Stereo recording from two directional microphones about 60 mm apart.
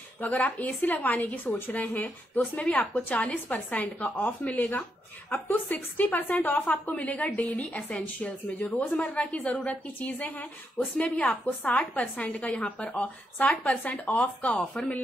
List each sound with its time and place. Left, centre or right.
0.2 s a woman's voice: left
2.7 s a woman's voice: centre
3.4 s a woman's voice: left